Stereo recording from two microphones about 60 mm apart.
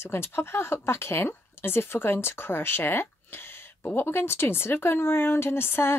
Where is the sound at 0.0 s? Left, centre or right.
Left.